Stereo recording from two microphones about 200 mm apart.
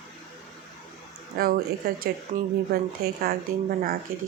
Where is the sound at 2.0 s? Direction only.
50° right (ahead or behind).